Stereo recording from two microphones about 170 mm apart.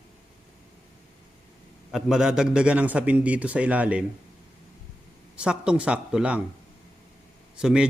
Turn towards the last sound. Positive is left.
turn(degrees=-5)  # may be behind; listen again after turning